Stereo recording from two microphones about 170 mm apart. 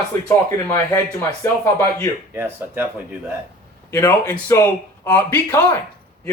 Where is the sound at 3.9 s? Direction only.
15° left (ahead or behind).